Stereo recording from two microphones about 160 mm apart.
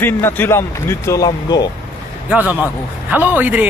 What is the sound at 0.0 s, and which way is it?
Speech, 15° left (ahead or behind).